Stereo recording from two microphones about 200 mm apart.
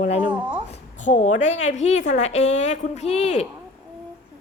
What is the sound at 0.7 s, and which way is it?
A woman's voice, 35° left (ahead or behind).